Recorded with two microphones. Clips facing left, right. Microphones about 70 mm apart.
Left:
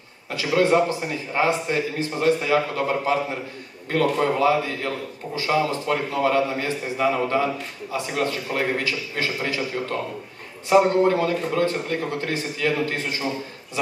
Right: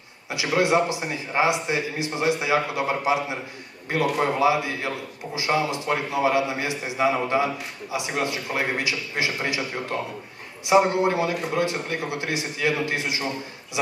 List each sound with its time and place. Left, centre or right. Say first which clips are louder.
0.3 s a man's voice: left 2 dB; centre